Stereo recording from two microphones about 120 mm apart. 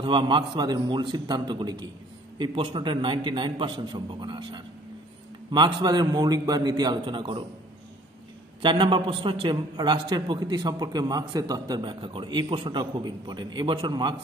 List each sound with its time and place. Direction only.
0.0 s a man's voice: 40° right (ahead or behind)
8.6 s a man's voice: 45° right (ahead or behind)